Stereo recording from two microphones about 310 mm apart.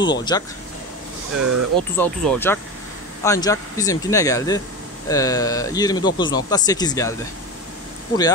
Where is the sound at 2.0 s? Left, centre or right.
Centre.